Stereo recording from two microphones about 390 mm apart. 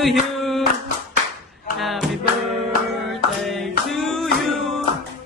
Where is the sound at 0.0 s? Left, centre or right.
Centre.